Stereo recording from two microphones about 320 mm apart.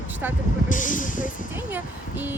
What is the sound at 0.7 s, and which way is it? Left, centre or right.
Speech, left.